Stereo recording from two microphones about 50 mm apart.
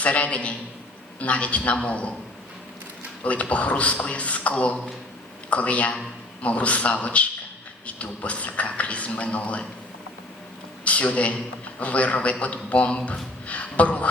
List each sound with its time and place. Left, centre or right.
0.0 s speech: left
3.2 s speech: left
10.8 s a man's voice: left